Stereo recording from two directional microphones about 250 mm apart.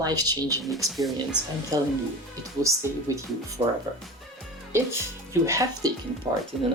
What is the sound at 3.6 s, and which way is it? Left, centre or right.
Speech, right.